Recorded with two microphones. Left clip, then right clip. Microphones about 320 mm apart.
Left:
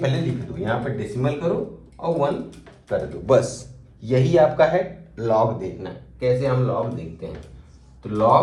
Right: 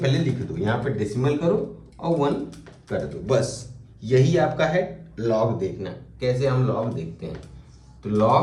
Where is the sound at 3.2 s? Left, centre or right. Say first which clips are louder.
Left 6 dB; centre.